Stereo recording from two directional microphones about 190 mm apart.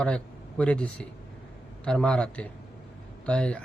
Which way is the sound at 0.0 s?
5° left (ahead or behind).